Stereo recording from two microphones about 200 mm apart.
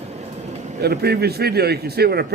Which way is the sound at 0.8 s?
55° right (ahead or behind).